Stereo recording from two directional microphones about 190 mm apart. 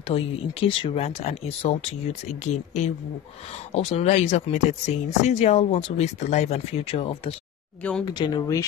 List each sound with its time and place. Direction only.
0.0 s speech: 30° left (ahead or behind)